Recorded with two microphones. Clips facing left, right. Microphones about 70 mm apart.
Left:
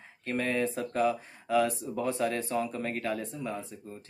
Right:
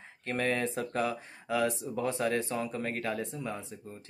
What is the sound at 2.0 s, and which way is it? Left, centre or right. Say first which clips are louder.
Speech: even; right.